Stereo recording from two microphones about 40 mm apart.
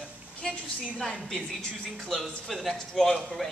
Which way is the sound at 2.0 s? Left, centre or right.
Centre.